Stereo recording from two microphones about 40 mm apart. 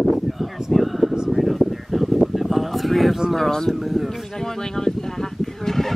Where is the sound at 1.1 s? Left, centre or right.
Centre.